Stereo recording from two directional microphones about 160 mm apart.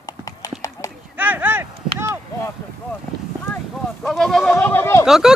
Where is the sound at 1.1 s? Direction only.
10° right (ahead or behind).